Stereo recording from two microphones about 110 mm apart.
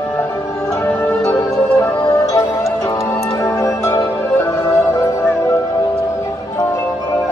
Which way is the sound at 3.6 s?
30° left (ahead or behind).